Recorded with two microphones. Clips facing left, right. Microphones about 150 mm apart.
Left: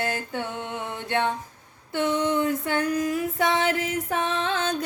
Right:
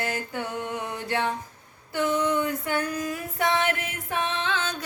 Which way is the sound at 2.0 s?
25° left (ahead or behind).